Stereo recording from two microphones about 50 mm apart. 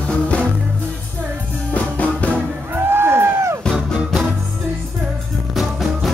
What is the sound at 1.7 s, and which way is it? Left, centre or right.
Music, left.